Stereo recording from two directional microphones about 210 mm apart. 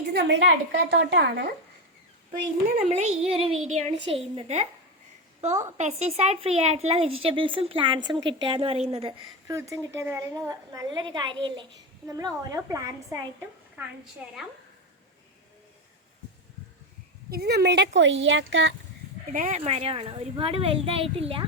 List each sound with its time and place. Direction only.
0.1 s a woman's voice: 55° right (ahead or behind)
2.9 s a woman's voice: 30° right (ahead or behind)
9.5 s a woman's voice: 15° right (ahead or behind)
17.3 s a woman's voice: 50° right (ahead or behind)
19.3 s a woman's voice: 30° right (ahead or behind)